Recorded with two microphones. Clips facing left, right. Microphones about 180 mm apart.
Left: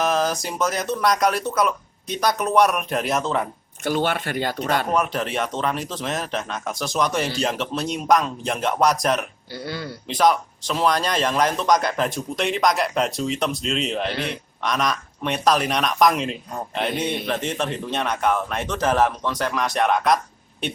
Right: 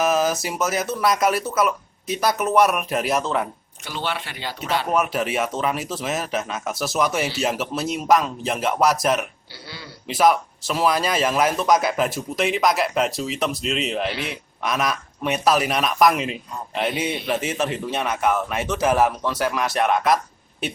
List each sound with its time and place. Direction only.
0.0 s a man's voice: 5° right (ahead or behind)
3.8 s speech: 50° left (ahead or behind)
4.9 s a man's voice: 5° right (ahead or behind)
9.6 s speech: 50° left (ahead or behind)
10.1 s a man's voice: 5° right (ahead or behind)
14.1 s speech: 40° left (ahead or behind)
14.6 s a man's voice: 5° right (ahead or behind)